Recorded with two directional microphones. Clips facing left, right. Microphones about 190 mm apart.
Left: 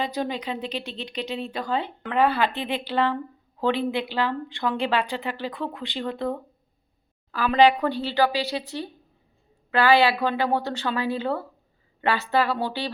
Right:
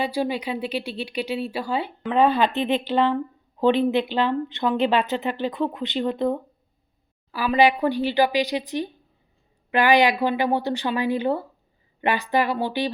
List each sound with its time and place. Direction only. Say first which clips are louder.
0.0 s speech: right 3 dB; 10° right (ahead or behind)
2.1 s speech: right 3 dB; 20° right (ahead or behind)
7.3 s speech: left 1 dB; 10° right (ahead or behind)